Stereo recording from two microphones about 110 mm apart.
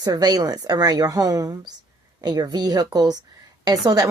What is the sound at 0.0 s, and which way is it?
Speech, 35° right (ahead or behind).